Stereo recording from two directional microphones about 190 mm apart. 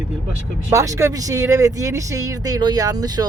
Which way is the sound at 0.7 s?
15° right (ahead or behind).